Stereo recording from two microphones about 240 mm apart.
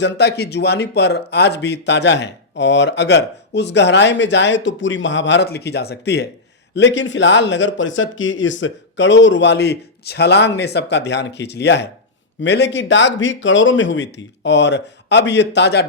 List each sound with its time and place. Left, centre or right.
0.0 s speech: left